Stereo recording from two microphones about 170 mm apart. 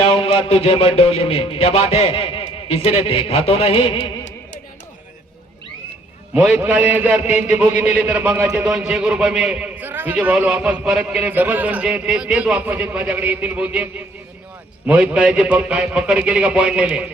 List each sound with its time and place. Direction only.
0.0 s speech: 35° left (ahead or behind)
6.3 s a man's voice: 10° right (ahead or behind)
8.9 s a man's voice: 5° right (ahead or behind)
14.8 s a man's voice: 10° right (ahead or behind)